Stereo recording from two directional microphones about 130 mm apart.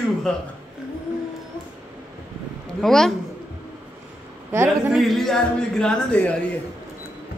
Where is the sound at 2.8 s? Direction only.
5° left (ahead or behind).